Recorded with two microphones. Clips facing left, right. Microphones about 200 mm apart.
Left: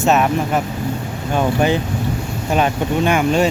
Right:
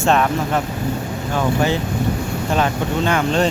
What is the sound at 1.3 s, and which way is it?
Speech, 20° left (ahead or behind).